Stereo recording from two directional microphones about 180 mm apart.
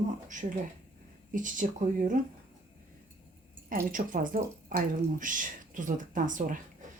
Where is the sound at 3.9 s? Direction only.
50° right (ahead or behind).